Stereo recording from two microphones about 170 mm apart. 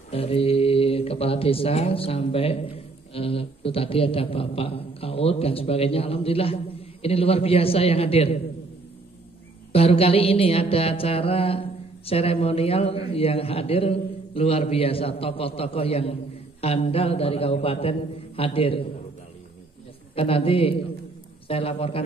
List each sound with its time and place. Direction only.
0.1 s speech: 35° left (ahead or behind)
9.7 s speech: 35° left (ahead or behind)
20.2 s speech: 35° left (ahead or behind)